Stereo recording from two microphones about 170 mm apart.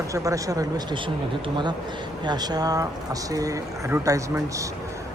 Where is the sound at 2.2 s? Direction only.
25° right (ahead or behind).